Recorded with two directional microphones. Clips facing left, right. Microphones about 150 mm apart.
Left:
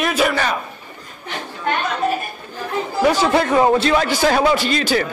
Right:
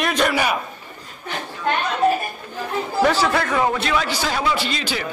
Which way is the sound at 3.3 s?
25° left (ahead or behind).